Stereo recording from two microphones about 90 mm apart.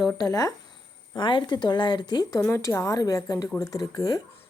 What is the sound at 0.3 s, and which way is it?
Speech, 40° left (ahead or behind).